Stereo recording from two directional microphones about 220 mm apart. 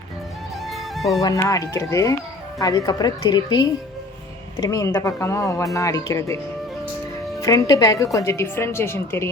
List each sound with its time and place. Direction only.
0.7 s music: centre (ahead or behind)
1.2 s speech: 15° left (ahead or behind)
7.4 s speech: 15° left (ahead or behind)